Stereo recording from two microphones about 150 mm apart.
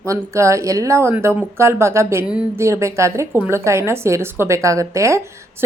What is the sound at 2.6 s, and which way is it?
Speech, 20° right (ahead or behind).